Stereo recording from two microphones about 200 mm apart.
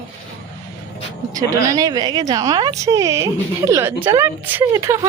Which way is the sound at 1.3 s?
15° right (ahead or behind).